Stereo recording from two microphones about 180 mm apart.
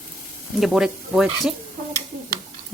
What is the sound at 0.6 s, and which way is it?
Speech, 5° right (ahead or behind).